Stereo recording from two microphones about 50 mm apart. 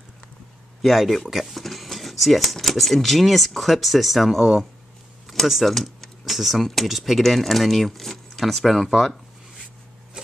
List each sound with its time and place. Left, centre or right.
0.8 s speech: centre
10.2 s vehicle: centre